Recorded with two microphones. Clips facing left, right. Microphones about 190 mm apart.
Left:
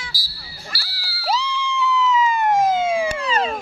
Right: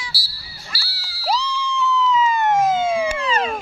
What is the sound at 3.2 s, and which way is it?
Emergency vehicle, 40° left (ahead or behind).